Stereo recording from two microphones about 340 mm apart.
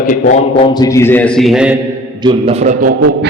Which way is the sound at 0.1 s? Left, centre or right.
Centre.